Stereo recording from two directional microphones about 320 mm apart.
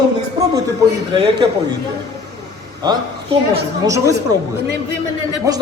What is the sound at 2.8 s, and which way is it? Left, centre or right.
Speech, centre.